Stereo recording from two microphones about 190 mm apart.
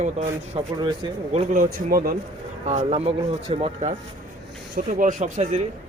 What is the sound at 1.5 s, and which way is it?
Speech, 45° right (ahead or behind).